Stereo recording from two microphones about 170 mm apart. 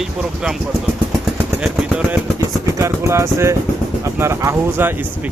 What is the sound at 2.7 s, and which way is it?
Speech, 20° right (ahead or behind).